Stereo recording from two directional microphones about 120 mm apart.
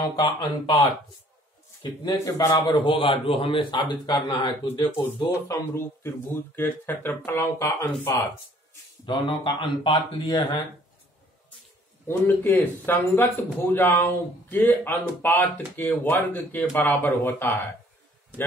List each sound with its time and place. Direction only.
0.1 s a man's voice: 40° left (ahead or behind)
2.6 s a man's voice: 40° left (ahead or behind)
5.5 s speech: 20° left (ahead or behind)
9.0 s a man's voice: 45° left (ahead or behind)
12.5 s speech: 15° left (ahead or behind)